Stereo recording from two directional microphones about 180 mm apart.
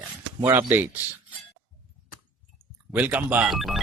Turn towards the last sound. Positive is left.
turn(degrees=0)  # may be behind; listen again after turning